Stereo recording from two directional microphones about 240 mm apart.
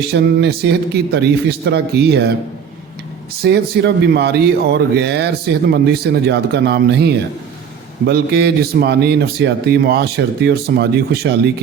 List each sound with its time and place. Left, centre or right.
0.0 s speech: right
3.4 s speech: right